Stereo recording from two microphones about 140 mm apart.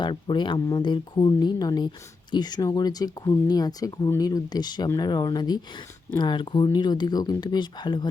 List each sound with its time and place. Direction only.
0.0 s speech: 35° left (ahead or behind)